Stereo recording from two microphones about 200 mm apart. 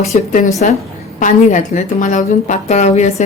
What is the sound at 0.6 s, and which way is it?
A woman's voice, 40° left (ahead or behind).